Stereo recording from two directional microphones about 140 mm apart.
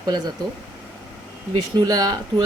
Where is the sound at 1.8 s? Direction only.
25° right (ahead or behind).